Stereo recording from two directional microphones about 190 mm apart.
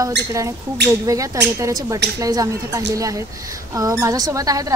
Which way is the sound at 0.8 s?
65° right (ahead or behind).